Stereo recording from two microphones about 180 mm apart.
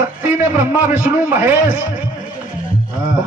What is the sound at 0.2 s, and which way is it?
A man's voice, 10° right (ahead or behind).